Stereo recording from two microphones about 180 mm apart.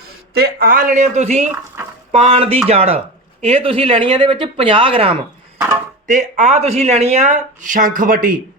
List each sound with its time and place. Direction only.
0.3 s speech: 60° right (ahead or behind); by 5.1 s 30° right (ahead or behind)
5.5 s speech: 15° right (ahead or behind)
6.1 s speech: 45° right (ahead or behind)